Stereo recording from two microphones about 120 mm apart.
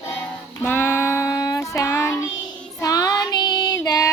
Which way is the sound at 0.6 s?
20° left (ahead or behind).